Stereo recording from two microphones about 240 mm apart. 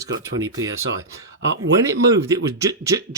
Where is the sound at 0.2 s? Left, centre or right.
Centre.